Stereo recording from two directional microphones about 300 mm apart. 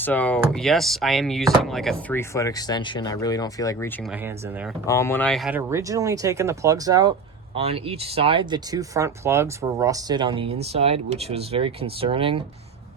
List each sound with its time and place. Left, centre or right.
0.0 s speech: centre
4.9 s speech: centre